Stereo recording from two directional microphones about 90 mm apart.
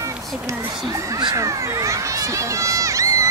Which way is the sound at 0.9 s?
35° right (ahead or behind).